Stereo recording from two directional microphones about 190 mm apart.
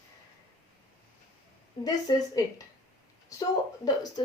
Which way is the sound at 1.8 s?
20° left (ahead or behind).